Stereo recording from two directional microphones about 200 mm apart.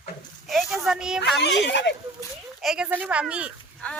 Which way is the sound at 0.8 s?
5° right (ahead or behind).